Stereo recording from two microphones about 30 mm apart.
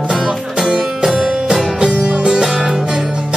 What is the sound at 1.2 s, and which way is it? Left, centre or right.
Music, centre.